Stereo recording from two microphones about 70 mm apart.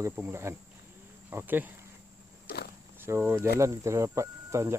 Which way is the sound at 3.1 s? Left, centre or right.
Right.